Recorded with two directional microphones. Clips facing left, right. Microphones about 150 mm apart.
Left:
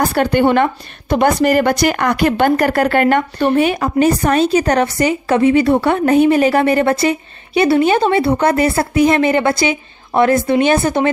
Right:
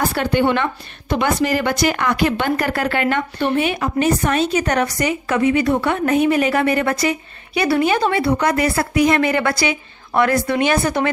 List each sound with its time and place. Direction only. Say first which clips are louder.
0.1 s a woman's voice: left 4 dB; 50° left (ahead or behind); by 11.1 s 25° left (ahead or behind)